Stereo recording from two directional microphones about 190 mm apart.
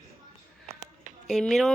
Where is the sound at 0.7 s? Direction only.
35° right (ahead or behind).